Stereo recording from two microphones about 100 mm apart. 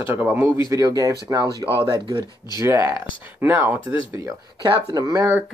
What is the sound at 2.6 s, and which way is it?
Speech, 30° right (ahead or behind).